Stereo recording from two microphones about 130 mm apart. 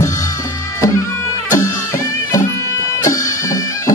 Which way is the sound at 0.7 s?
25° left (ahead or behind).